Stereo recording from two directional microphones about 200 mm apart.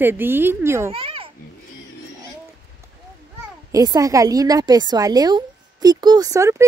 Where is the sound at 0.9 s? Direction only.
25° right (ahead or behind).